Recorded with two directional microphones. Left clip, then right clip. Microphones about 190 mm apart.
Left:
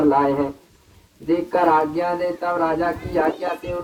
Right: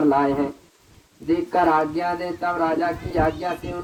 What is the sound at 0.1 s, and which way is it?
Speech, 20° right (ahead or behind).